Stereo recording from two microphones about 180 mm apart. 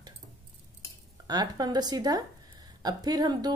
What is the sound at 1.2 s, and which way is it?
Speech, 20° right (ahead or behind).